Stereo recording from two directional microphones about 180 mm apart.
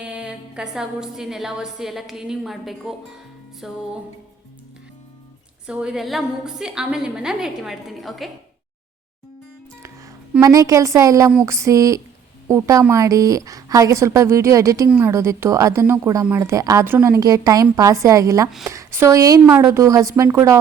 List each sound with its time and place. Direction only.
0.0 s a woman's voice: 5° right (ahead or behind)
5.6 s a woman's voice: 5° right (ahead or behind)
10.4 s a woman's voice: 20° right (ahead or behind)
14.8 s a woman's voice: 5° right (ahead or behind)